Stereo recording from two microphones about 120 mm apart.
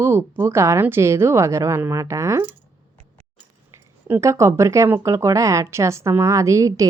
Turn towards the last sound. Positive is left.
turn(degrees=-25)  # may be behind; listen again after turning